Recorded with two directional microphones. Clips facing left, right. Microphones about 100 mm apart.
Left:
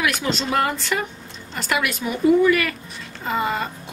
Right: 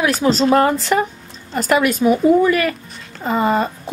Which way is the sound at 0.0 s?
35° right (ahead or behind).